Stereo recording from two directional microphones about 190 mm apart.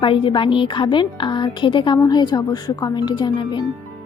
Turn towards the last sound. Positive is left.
turn(degrees=25)  # may be behind; listen again after turning